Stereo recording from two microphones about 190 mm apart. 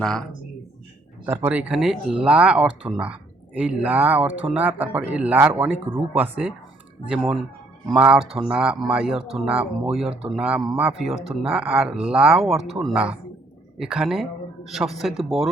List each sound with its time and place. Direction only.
0.0 s speech: 5° left (ahead or behind)
1.2 s speech: 10° right (ahead or behind)
7.9 s speech: 5° right (ahead or behind)
10.1 s speech: 30° right (ahead or behind)
10.3 s speech: 5° right (ahead or behind)
11.1 s speech: 35° right (ahead or behind)
11.4 s speech: 5° right (ahead or behind)